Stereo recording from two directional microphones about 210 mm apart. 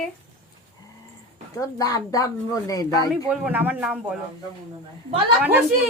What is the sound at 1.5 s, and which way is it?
Speech, 15° left (ahead or behind).